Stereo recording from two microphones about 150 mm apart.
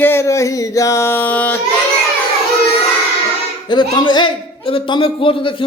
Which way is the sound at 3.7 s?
30° left (ahead or behind).